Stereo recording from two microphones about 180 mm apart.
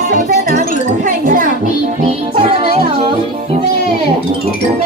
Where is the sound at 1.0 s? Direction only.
45° right (ahead or behind).